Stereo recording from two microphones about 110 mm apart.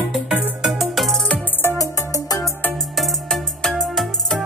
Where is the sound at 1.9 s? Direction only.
30° left (ahead or behind).